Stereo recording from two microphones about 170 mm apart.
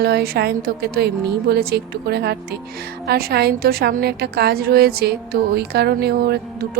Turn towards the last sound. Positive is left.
turn(degrees=-70)  # may be behind; listen again after turning